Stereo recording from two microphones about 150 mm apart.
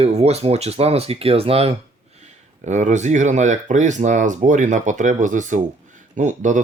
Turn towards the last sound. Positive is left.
turn(degrees=-55)  # may be behind; listen again after turning